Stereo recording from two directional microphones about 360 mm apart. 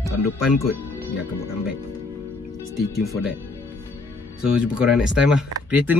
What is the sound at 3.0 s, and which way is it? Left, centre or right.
Speech, centre.